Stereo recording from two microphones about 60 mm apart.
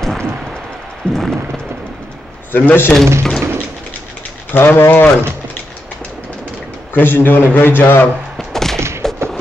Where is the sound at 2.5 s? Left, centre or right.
Left.